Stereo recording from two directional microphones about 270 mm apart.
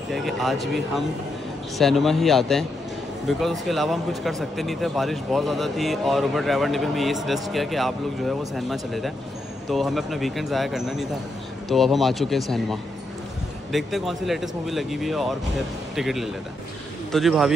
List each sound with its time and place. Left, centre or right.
0.1 s speech: centre